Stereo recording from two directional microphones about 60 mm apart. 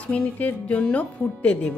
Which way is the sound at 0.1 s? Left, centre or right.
Left.